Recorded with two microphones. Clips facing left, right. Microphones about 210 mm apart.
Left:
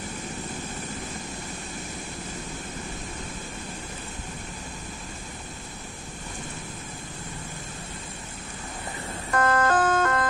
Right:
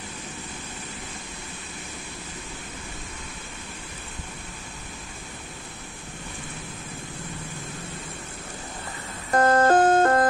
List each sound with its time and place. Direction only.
9.3 s music: 35° right (ahead or behind)